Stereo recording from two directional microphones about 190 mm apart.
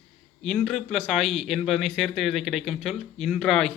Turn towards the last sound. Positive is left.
turn(degrees=0)  # may be behind; listen again after turning